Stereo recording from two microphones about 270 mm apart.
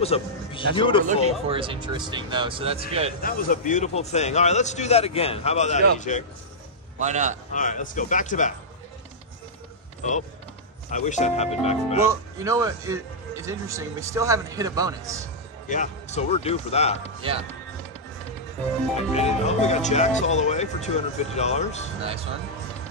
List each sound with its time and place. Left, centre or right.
0.0 s a man's voice: left
1.5 s speech: centre
3.2 s a man's voice: left
7.0 s speech: right
7.5 s a man's voice: left
10.9 s a man's voice: left
12.1 s a man's voice: centre
15.7 s a man's voice: left
19.1 s a man's voice: left
22.0 s speech: right